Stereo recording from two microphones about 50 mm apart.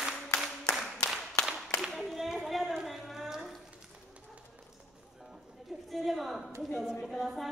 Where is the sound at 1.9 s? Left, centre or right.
Centre.